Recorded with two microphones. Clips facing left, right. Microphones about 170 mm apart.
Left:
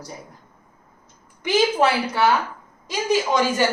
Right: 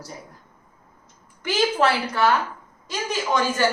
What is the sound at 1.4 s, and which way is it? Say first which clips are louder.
Speech: left 2 dB; 15° left (ahead or behind).